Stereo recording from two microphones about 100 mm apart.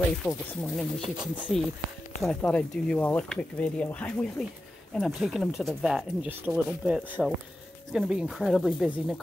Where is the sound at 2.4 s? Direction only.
10° left (ahead or behind).